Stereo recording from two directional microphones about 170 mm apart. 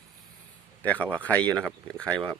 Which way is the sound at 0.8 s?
10° left (ahead or behind).